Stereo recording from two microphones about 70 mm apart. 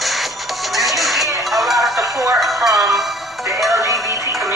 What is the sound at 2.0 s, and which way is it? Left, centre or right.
Music, right.